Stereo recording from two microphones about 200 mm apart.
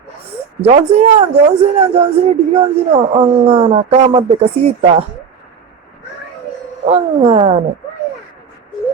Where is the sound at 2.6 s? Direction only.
30° right (ahead or behind).